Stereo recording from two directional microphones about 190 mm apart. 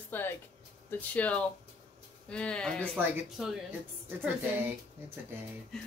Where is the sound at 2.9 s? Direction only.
5° right (ahead or behind).